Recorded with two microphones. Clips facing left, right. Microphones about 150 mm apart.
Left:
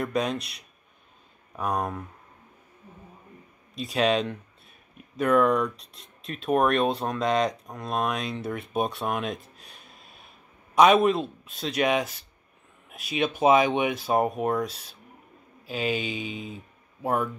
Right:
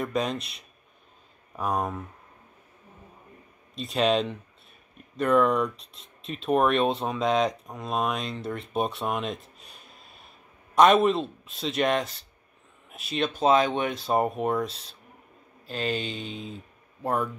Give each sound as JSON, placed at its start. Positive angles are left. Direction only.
{"t": 0.0, "sound": "speech", "side_deg": 0}
{"t": 1.6, "sound": "speech", "side_deg": 0}
{"t": 3.7, "sound": "speech", "side_deg": 0}